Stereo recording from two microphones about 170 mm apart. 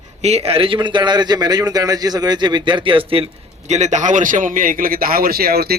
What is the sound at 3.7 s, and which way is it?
A man's voice, 45° right (ahead or behind).